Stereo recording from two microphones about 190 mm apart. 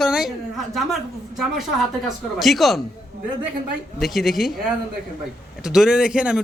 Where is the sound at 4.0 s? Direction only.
Centre (ahead or behind).